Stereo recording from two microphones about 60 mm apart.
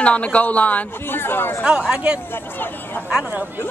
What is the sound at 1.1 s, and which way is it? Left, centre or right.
Speech, left.